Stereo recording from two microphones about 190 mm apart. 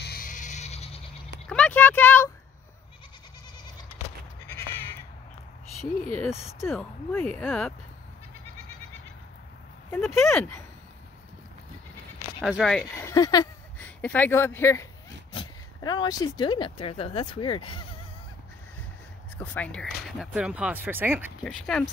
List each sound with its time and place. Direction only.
0.0 s a sound: 50° left (ahead or behind); by 1.0 s 35° left (ahead or behind)
1.5 s a sound: 5° left (ahead or behind)
6.6 s speech: 5° left (ahead or behind)
9.8 s speech: 10° left (ahead or behind)
12.4 s speech: centre (ahead or behind); by 13.5 s 20° left (ahead or behind)
13.7 s speech: 10° left (ahead or behind); by 17.8 s 25° left (ahead or behind)
19.3 s speech: 10° left (ahead or behind); by 21.3 s 10° right (ahead or behind)
21.5 s speech: 5° left (ahead or behind)